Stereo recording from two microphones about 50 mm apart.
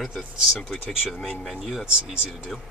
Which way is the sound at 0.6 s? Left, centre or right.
Centre.